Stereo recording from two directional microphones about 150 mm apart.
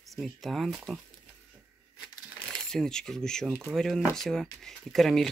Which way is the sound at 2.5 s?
5° left (ahead or behind).